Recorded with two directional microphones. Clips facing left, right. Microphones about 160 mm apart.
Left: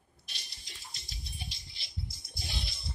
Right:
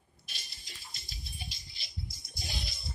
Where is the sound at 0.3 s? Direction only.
50° right (ahead or behind).